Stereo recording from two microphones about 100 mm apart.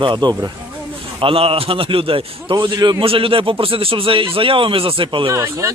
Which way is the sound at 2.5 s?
45° right (ahead or behind).